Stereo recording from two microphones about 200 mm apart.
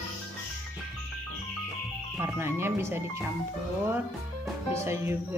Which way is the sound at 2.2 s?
10° right (ahead or behind).